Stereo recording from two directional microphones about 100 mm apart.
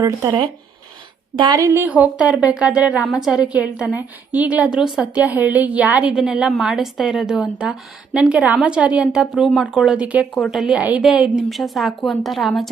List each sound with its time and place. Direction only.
0.3 s speech: 55° right (ahead or behind)
1.5 s a woman's voice: 30° right (ahead or behind)
1.9 s a woman's voice: 15° right (ahead or behind)
10.3 s a woman's voice: centre (ahead or behind)